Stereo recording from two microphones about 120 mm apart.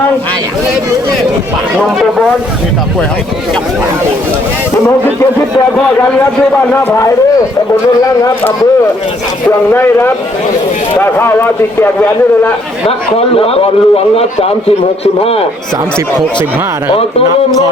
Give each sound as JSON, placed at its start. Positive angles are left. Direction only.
{"t": 1.8, "sound": "speech", "side_deg": 0}
{"t": 6.9, "sound": "a man's voice", "side_deg": 25}
{"t": 11.0, "sound": "a man's voice", "side_deg": 20}
{"t": 13.1, "sound": "a man's voice", "side_deg": 55}